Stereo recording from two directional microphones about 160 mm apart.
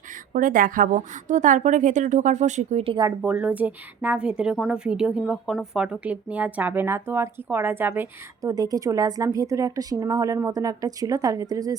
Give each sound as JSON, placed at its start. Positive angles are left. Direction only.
{"t": 0.3, "sound": "a woman's voice", "side_deg": -60}
{"t": 3.2, "sound": "a woman's voice", "side_deg": -10}